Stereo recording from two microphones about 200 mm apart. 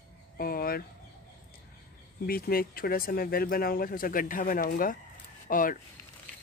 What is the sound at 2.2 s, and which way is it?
Speech, 50° left (ahead or behind).